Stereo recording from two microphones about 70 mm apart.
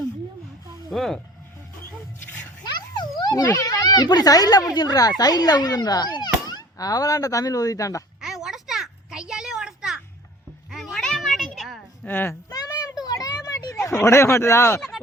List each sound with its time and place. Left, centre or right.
0.9 s speech: centre
2.7 s music: left
3.5 s a child's voice: left
4.7 s a child's voice: left
8.2 s a sound: centre
10.7 s cat: centre
11.1 s a sound: centre
12.0 s a child's voice: left
12.5 s children playing: left
13.8 s speech: left